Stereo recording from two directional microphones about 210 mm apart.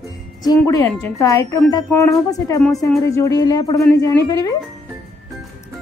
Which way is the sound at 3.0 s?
15° left (ahead or behind).